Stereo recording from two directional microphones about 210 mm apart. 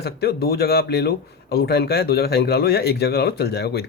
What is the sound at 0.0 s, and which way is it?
Speech, 50° left (ahead or behind).